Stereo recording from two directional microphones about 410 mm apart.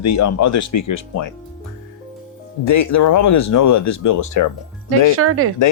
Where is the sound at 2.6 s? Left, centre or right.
Left.